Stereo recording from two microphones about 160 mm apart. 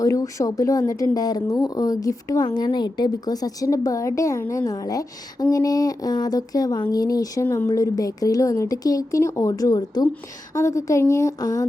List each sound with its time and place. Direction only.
0.0 s speech: 20° left (ahead or behind)